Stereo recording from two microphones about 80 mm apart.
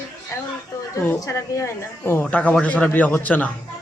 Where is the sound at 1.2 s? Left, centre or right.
Left.